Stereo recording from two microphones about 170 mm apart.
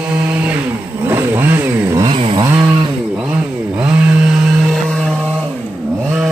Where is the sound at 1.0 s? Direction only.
15° right (ahead or behind).